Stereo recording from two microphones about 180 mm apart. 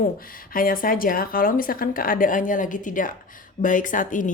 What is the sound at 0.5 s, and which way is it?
Speech, 50° left (ahead or behind).